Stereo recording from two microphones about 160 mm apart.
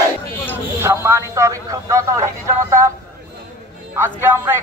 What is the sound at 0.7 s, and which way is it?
Speech, 15° right (ahead or behind).